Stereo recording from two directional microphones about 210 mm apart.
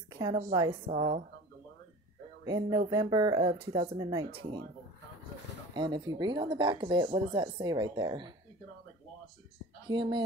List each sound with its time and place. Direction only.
0.1 s a sound: 15° right (ahead or behind)
0.5 s speech: 20° right (ahead or behind)
0.9 s a woman's voice: 35° right (ahead or behind)
2.4 s speech: 20° right (ahead or behind)
4.3 s speech: 50° right (ahead or behind)
5.8 s speech: 20° right (ahead or behind)
9.8 s speech: 20° right (ahead or behind)